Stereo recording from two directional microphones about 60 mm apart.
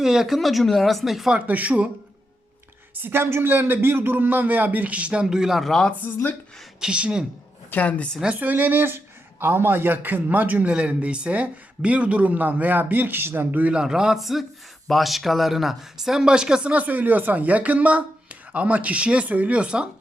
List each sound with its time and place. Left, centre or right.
0.0 s speech: centre
1.3 s speech: right
3.0 s a man's voice: right
5.2 s speech: centre
6.7 s speech: centre
7.7 s a woman's voice: left
8.4 s a man's voice: right
13.7 s speech: centre